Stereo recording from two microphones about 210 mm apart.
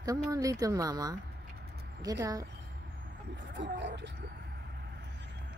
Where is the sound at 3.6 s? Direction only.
55° right (ahead or behind).